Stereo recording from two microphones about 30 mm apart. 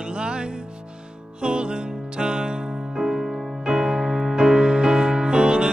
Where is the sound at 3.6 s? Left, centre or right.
Right.